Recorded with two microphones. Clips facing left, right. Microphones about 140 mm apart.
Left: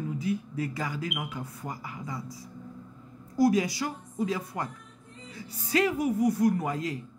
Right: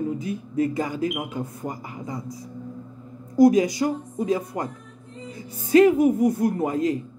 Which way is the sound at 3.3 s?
20° right (ahead or behind).